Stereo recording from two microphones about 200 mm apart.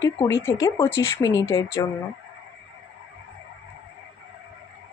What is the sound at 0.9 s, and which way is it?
Speech, 75° left (ahead or behind).